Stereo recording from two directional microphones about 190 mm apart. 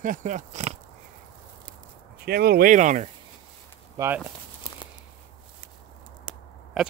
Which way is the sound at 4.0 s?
20° right (ahead or behind).